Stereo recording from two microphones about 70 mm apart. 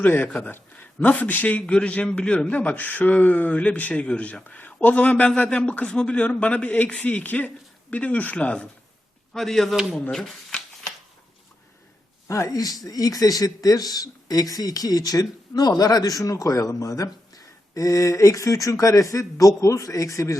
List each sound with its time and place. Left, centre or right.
0.0 s a man's voice: left
9.3 s speech: centre
10.1 s shuffling cards: centre
12.3 s speech: left